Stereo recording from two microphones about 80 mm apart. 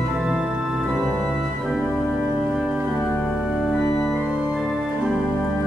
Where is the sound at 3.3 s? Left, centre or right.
Centre.